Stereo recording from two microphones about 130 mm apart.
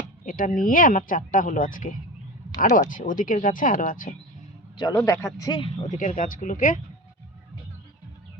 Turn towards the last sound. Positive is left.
turn(degrees=90)